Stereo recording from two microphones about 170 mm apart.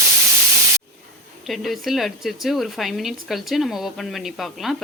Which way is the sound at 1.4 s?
Centre (ahead or behind).